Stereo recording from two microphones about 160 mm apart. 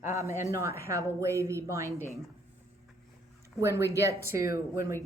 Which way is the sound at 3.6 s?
20° right (ahead or behind).